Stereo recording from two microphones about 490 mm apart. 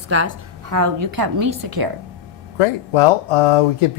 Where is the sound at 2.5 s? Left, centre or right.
Left.